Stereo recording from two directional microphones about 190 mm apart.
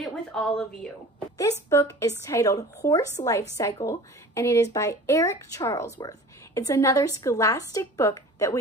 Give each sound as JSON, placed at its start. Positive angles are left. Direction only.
{"t": 0.0, "sound": "a woman's voice", "side_deg": 5}
{"t": 1.4, "sound": "a woman's voice", "side_deg": 15}